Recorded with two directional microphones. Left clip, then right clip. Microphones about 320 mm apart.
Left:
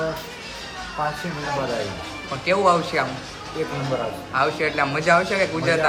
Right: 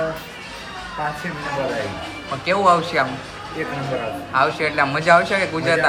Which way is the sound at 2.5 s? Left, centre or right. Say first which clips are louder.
Right 2 dB; centre.